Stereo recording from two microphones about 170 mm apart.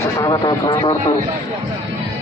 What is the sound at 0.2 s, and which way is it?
Speech, 25° left (ahead or behind).